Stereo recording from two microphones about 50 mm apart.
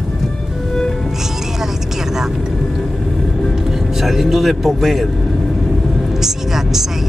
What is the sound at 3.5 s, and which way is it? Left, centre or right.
Vehicle, centre.